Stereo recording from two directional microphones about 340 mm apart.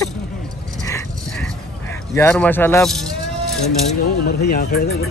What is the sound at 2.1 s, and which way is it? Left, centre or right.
Speech, centre.